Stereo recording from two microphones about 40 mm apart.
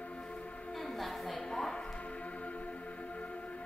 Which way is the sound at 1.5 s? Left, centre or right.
Centre.